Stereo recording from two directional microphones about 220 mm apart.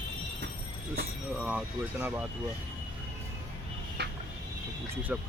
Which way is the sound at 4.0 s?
50° right (ahead or behind).